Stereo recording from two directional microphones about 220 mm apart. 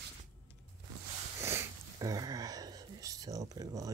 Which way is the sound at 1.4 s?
15° right (ahead or behind).